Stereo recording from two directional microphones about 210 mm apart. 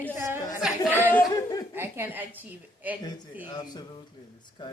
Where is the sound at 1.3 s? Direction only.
20° left (ahead or behind).